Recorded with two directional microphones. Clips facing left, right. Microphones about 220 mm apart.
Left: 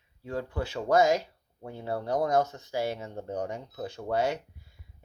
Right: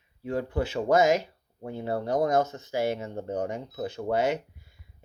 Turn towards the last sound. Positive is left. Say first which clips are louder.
# right 3 dB
turn(degrees=-20)  # may be behind; listen again after turning